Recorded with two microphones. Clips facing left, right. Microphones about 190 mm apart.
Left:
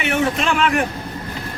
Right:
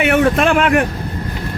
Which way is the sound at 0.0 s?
55° right (ahead or behind).